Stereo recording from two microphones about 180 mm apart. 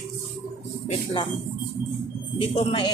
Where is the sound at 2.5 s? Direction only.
30° left (ahead or behind).